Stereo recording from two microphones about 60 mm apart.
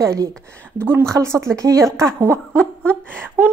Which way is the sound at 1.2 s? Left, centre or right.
Right.